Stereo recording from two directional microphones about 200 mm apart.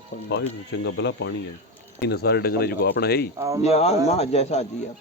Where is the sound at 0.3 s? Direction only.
60° left (ahead or behind).